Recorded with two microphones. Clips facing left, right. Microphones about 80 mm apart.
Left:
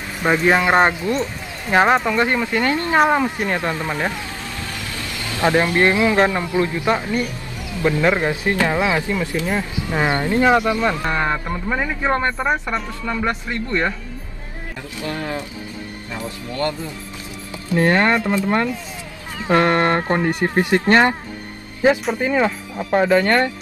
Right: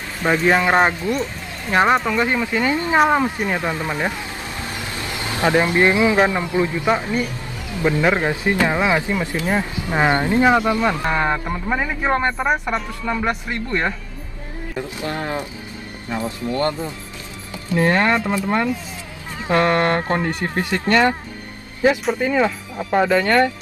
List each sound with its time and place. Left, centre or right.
0.2 s speech: centre
4.9 s speech: right
15.0 s speech: right
16.5 s speech: right
17.7 s speech: centre
19.4 s speech: left
22.2 s speech: left
22.8 s speech: centre
23.0 s speech: left